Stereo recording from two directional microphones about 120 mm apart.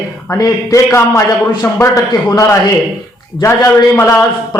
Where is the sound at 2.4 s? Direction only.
30° left (ahead or behind).